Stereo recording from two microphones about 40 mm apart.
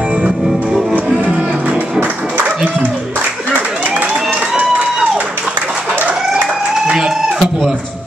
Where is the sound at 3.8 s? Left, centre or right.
Right.